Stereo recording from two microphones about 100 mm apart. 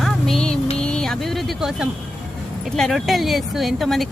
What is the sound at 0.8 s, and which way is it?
Vehicle, 10° left (ahead or behind).